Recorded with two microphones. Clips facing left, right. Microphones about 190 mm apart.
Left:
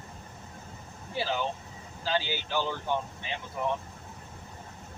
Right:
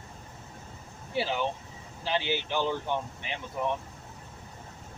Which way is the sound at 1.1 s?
15° right (ahead or behind).